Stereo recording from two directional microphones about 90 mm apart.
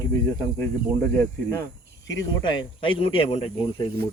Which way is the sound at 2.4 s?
60° left (ahead or behind).